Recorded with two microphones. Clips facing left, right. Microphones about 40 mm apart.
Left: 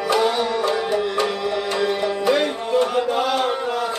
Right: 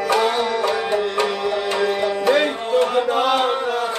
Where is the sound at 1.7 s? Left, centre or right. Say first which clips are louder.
Right 1 dB; right.